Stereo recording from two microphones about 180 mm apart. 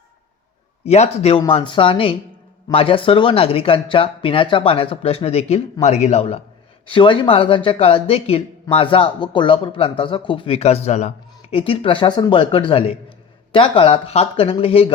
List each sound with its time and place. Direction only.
0.9 s speech: 35° left (ahead or behind)